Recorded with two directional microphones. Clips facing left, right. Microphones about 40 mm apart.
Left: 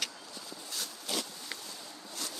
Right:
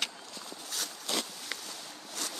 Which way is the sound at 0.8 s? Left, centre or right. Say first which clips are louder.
Right 2 dB; right.